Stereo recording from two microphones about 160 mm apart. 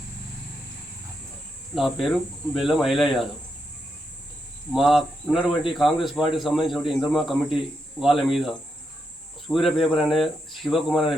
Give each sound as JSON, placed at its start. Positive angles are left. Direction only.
{"t": 1.7, "sound": "speech", "side_deg": 0}
{"t": 4.7, "sound": "speech", "side_deg": 0}